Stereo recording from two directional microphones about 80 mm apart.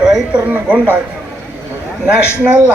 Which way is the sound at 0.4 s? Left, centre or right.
Right.